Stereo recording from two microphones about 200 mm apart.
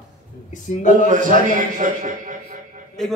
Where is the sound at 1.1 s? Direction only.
40° right (ahead or behind).